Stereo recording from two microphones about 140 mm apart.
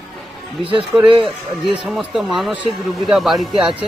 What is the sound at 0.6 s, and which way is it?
Speech, 40° right (ahead or behind).